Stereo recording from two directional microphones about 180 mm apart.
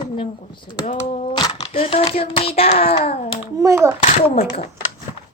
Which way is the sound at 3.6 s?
15° right (ahead or behind).